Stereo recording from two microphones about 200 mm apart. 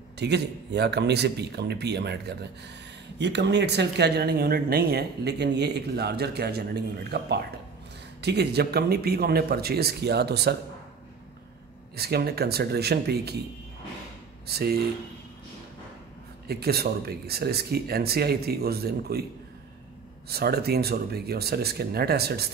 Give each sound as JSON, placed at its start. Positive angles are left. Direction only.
{"t": 0.2, "sound": "speech", "side_deg": -55}
{"t": 11.9, "sound": "speech", "side_deg": -50}
{"t": 14.5, "sound": "speech", "side_deg": -50}
{"t": 16.4, "sound": "speech", "side_deg": -50}
{"t": 20.2, "sound": "speech", "side_deg": -50}